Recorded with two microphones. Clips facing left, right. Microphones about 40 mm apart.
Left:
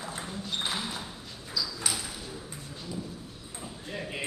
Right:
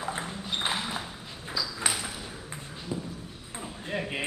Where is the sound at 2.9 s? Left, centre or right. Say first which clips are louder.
Right 4 dB; right.